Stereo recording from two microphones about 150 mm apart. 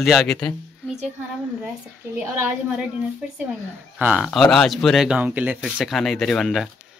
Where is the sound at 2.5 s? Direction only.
5° right (ahead or behind).